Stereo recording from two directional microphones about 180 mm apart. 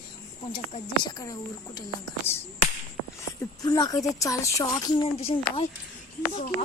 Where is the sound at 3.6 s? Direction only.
20° left (ahead or behind).